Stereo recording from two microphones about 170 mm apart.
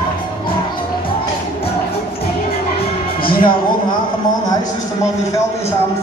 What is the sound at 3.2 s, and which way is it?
Music, 30° left (ahead or behind).